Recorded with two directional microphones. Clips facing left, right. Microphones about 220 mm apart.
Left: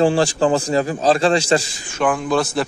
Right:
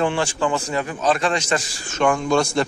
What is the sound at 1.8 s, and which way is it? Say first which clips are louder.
Speech: even; 10° left (ahead or behind).